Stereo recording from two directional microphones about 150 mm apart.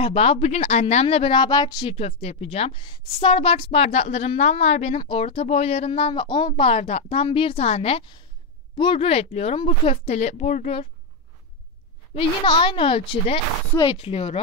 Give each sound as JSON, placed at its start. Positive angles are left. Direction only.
{"t": 0.0, "sound": "speech", "side_deg": 40}
{"t": 2.0, "sound": "a woman's voice", "side_deg": 40}
{"t": 5.0, "sound": "a woman's voice", "side_deg": 40}
{"t": 12.2, "sound": "speech", "side_deg": 35}